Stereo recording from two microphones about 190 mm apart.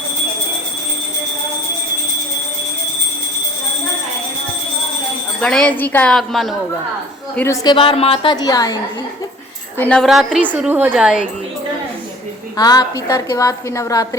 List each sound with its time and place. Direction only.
5.4 s a woman's voice: 5° left (ahead or behind)
7.3 s a woman's voice: 15° left (ahead or behind)
9.7 s a woman's voice: 5° left (ahead or behind)
12.5 s a woman's voice: 20° left (ahead or behind)